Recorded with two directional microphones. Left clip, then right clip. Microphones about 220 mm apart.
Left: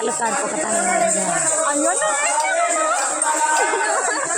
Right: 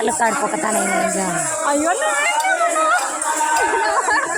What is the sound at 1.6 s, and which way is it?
Speech, 35° right (ahead or behind).